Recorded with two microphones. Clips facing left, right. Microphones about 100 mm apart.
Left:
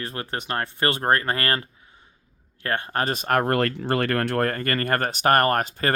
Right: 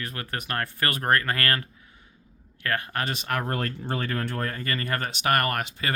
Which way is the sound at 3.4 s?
80° left.